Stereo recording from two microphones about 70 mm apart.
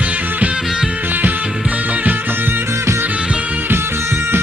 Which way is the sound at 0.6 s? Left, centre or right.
Centre.